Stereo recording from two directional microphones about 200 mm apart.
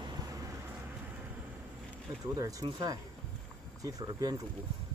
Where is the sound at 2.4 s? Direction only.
15° right (ahead or behind).